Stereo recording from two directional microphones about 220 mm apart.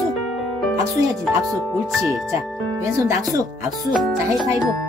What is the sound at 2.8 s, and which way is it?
Speech, 15° right (ahead or behind).